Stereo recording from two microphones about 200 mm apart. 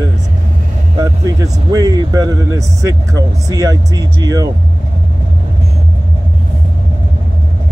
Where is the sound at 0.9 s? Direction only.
15° right (ahead or behind).